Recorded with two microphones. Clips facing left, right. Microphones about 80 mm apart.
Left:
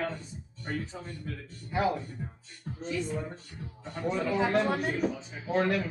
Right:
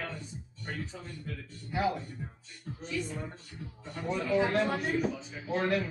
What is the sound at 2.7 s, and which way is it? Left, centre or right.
Music, left.